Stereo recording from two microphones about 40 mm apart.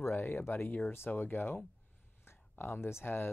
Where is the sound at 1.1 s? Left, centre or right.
Left.